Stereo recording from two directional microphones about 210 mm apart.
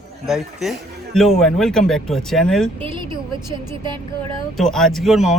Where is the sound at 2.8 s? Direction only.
25° right (ahead or behind).